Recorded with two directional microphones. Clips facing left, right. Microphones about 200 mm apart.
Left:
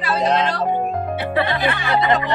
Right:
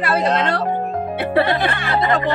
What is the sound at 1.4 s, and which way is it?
Speech, 60° right (ahead or behind).